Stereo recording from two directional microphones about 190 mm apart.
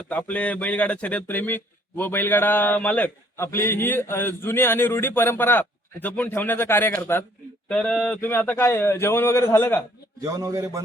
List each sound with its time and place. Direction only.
0.1 s speech: 5° left (ahead or behind)
10.2 s a man's voice: 20° right (ahead or behind)